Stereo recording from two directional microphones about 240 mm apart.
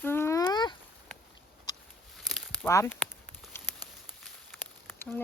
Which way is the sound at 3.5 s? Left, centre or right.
Centre.